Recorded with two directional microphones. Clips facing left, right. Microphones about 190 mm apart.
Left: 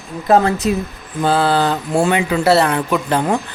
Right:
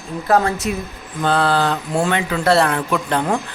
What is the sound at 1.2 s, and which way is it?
Speech, 5° left (ahead or behind).